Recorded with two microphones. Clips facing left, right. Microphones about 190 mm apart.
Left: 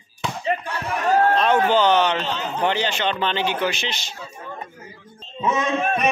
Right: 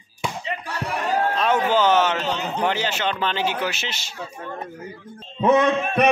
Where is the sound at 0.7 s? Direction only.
40° right (ahead or behind).